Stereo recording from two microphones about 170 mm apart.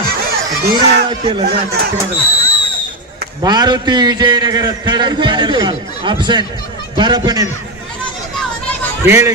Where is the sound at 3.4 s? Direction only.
25° right (ahead or behind).